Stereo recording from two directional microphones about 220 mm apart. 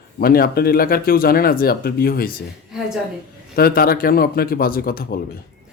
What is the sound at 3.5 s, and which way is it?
Speech, 45° left (ahead or behind).